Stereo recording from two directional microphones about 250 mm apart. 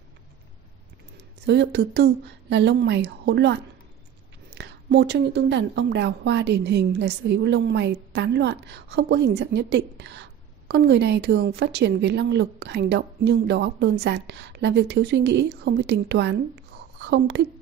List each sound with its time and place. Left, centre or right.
1.4 s a woman's voice: right